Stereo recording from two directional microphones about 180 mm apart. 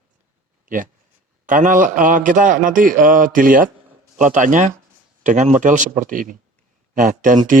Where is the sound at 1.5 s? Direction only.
50° right (ahead or behind).